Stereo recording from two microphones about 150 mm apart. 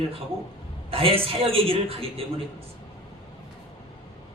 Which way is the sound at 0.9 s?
40° right (ahead or behind).